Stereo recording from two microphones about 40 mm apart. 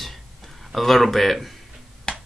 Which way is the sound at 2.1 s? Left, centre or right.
Left.